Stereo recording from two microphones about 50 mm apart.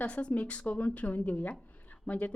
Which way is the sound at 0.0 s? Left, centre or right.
Left.